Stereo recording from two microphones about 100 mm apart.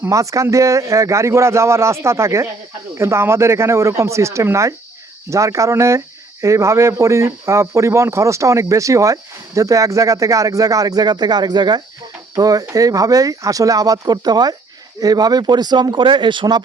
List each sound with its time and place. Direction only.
0.0 s speech: 30° right (ahead or behind); by 16.6 s 50° right (ahead or behind)